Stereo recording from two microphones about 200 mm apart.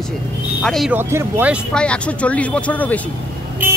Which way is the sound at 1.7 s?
5° left (ahead or behind).